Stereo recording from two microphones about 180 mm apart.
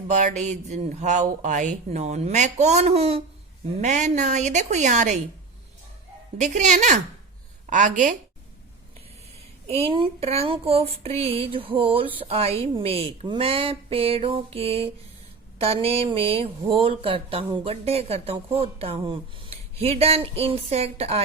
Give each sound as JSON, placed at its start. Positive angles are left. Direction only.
{"t": 0.1, "sound": "speech", "side_deg": -40}
{"t": 6.3, "sound": "speech", "side_deg": -40}
{"t": 9.6, "sound": "speech", "side_deg": -30}